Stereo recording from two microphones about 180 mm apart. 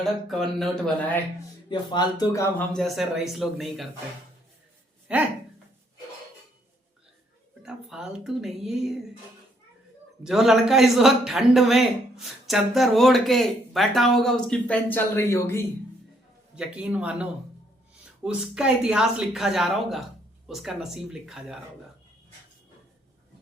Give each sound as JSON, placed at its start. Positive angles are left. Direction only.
{"t": 0.0, "sound": "speech", "side_deg": 0}
{"t": 1.9, "sound": "speech", "side_deg": 25}
{"t": 2.7, "sound": "speech", "side_deg": 0}
{"t": 5.1, "sound": "speech", "side_deg": -5}
{"t": 7.6, "sound": "speech", "side_deg": -5}
{"t": 10.2, "sound": "speech", "side_deg": 0}
{"t": 16.6, "sound": "speech", "side_deg": -5}